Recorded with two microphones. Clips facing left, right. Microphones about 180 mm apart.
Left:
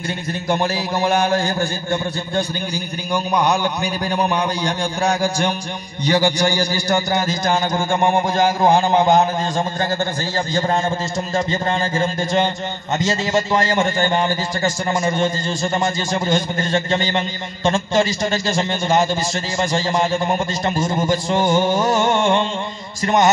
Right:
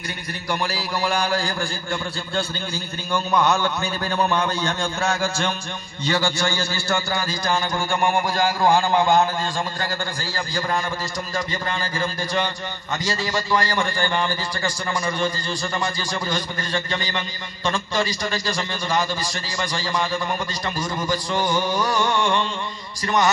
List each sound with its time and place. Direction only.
0.5 s a man's voice: 25° left (ahead or behind)
11.3 s a man's voice: 25° left (ahead or behind)